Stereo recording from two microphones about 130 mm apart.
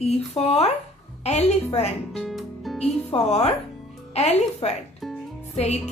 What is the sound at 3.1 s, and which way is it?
A woman's voice, 55° left (ahead or behind).